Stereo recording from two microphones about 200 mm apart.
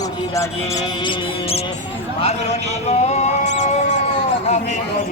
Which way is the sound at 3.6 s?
35° left (ahead or behind).